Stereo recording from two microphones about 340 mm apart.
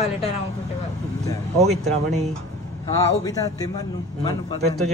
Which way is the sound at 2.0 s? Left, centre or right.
Centre.